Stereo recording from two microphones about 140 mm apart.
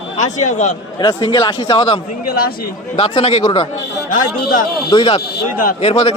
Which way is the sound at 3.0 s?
45° left (ahead or behind).